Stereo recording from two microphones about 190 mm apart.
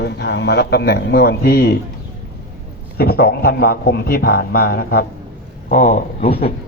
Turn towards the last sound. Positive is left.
turn(degrees=45)  # may be behind; listen again after turning